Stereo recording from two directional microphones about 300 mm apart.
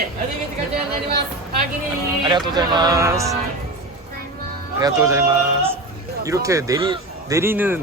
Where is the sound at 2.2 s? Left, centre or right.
Centre.